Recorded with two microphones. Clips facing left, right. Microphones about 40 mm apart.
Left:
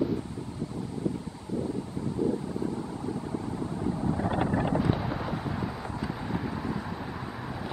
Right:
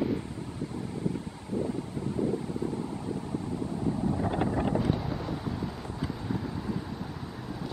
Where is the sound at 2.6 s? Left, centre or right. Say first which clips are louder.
Even; left.